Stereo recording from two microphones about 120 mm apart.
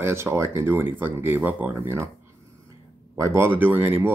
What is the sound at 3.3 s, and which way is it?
Speech, 20° right (ahead or behind).